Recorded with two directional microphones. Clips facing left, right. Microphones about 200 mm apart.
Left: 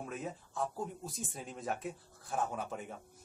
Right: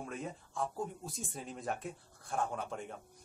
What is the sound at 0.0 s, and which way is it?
Speech, 5° left (ahead or behind).